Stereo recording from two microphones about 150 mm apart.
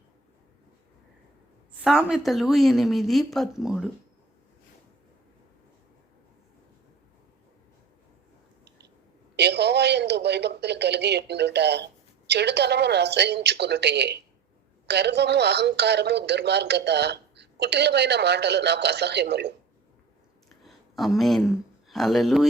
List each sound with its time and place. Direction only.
1.8 s speech: 5° right (ahead or behind)
9.3 s a sound: 90° right
12.3 s speech: 90° right
20.7 s speech: centre (ahead or behind)